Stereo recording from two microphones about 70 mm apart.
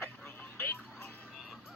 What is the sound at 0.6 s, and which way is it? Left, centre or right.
Music, left.